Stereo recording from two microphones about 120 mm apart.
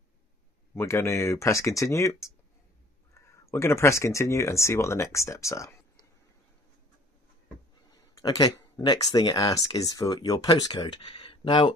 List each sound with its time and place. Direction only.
0.7 s speech: 25° left (ahead or behind)
3.2 s speech: 25° left (ahead or behind)
8.2 s speech: 35° left (ahead or behind)